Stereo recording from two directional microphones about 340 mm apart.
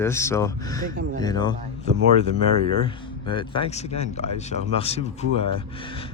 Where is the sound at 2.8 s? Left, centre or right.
Centre.